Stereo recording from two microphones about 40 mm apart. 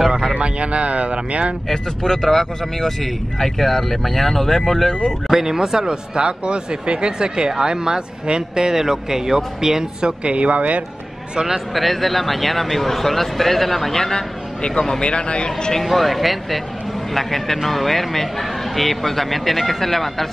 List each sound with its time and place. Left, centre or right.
0.3 s speech: right
1.7 s speech: centre
5.3 s speech: centre
10.2 s speech: right
11.7 s speech: centre
14.8 s speech: left
15.7 s speech: centre